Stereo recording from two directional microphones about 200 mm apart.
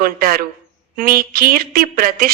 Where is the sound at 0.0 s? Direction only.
45° right (ahead or behind).